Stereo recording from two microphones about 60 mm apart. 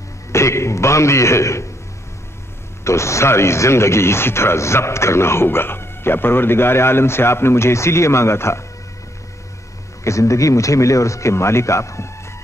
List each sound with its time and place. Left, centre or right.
0.3 s speech: left
2.8 s speech: left
10.0 s speech: left